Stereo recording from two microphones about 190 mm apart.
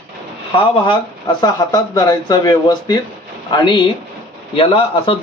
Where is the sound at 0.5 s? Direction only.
25° left (ahead or behind).